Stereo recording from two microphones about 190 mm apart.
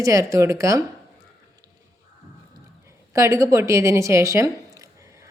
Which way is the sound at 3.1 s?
15° right (ahead or behind).